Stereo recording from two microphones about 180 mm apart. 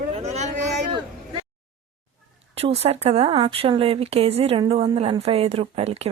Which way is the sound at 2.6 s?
35° right (ahead or behind).